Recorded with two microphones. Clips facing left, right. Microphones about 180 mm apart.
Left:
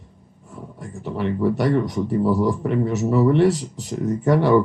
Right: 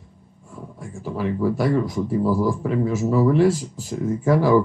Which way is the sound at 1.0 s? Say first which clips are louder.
Left 1 dB; centre (ahead or behind).